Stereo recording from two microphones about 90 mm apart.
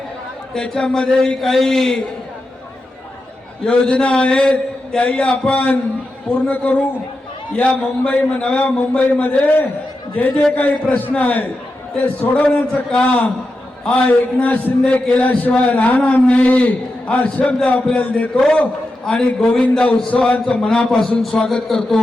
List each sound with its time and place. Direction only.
0.5 s a man's voice: 5° left (ahead or behind)
3.6 s a man's voice: 10° left (ahead or behind)